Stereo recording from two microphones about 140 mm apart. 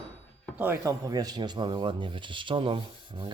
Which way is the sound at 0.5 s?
15° right (ahead or behind).